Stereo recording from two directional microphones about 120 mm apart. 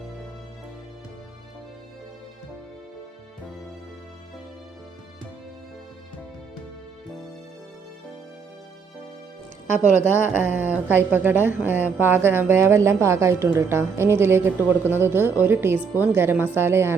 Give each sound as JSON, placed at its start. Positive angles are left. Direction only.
{"t": 9.7, "sound": "a woman's voice", "side_deg": -15}